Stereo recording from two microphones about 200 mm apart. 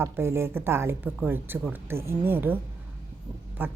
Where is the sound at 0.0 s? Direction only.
10° right (ahead or behind).